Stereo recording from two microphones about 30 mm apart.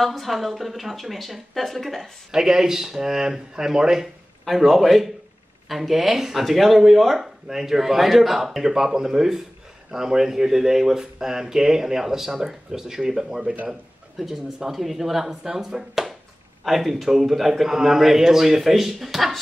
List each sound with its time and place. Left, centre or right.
0.0 s a woman's voice: centre
2.3 s speech: centre
4.6 s a woman's voice: centre
7.4 s speech: centre
14.2 s speech: centre
15.9 s a sound: centre
16.6 s speech: centre